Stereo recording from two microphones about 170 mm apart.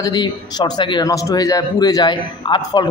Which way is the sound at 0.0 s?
25° left (ahead or behind).